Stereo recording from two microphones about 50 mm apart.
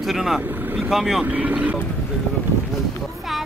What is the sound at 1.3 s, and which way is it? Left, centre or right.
Speech, right.